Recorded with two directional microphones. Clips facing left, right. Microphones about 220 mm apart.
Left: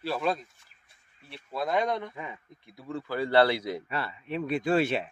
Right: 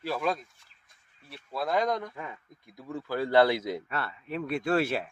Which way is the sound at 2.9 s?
10° right (ahead or behind).